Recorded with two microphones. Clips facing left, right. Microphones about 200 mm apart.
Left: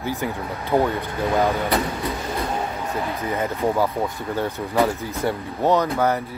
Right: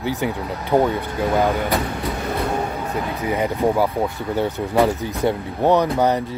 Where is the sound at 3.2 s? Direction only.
15° right (ahead or behind).